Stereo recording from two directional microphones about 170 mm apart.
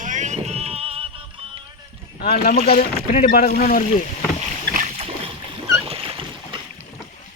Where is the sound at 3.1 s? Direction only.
50° left (ahead or behind).